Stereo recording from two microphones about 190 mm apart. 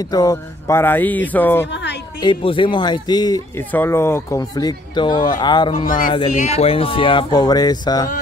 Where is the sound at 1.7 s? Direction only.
65° left (ahead or behind).